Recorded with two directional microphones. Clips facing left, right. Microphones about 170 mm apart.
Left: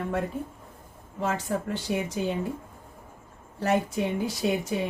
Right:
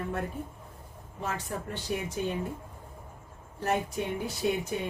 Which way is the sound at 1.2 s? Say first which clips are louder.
Left 6 dB; 90° left.